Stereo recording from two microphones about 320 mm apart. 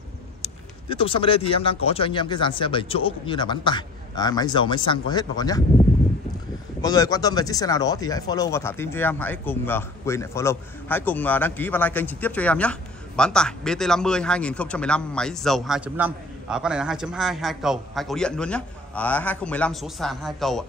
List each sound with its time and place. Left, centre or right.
0.4 s a man's voice: centre
6.8 s speech: centre